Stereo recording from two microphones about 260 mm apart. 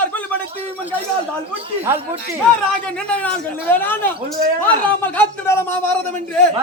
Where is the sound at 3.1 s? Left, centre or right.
Centre.